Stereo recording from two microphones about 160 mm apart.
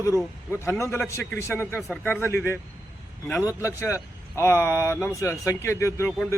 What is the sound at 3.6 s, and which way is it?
Speech, 20° left (ahead or behind).